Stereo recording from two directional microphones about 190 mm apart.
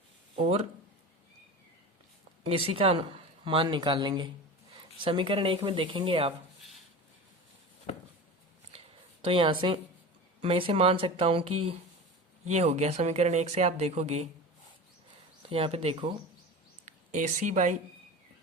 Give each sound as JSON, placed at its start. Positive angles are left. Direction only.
{"t": 0.3, "sound": "speech", "side_deg": -30}
{"t": 2.4, "sound": "speech", "side_deg": -30}
{"t": 6.6, "sound": "a sound", "side_deg": 0}
{"t": 8.7, "sound": "a sound", "side_deg": -35}
{"t": 9.2, "sound": "speech", "side_deg": -25}
{"t": 15.4, "sound": "speech", "side_deg": -30}
{"t": 16.8, "sound": "speech", "side_deg": -40}